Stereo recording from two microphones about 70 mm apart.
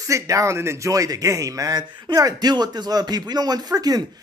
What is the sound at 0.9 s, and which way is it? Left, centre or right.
Speech, right.